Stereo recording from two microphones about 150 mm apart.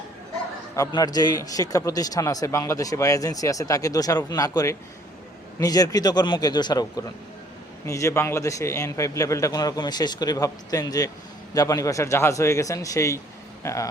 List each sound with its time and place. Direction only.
0.8 s a man's voice: 25° left (ahead or behind)